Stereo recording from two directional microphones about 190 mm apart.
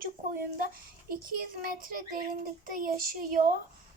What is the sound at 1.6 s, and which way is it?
Child singing, 50° right (ahead or behind).